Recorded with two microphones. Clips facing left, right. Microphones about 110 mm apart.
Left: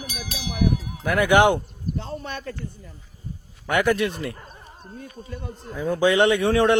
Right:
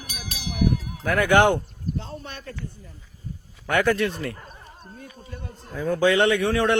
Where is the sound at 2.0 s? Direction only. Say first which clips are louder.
Left 3 dB; 65° left (ahead or behind).